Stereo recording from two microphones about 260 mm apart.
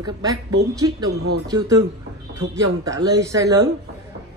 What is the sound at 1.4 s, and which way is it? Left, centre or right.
Speech, centre.